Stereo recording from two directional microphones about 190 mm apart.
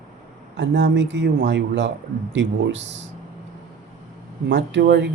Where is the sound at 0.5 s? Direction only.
70° right (ahead or behind).